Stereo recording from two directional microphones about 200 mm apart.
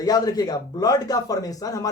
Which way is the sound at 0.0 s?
20° left (ahead or behind).